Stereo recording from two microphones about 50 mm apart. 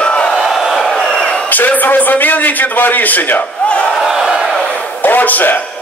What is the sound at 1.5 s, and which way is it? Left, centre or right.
A man's voice, left.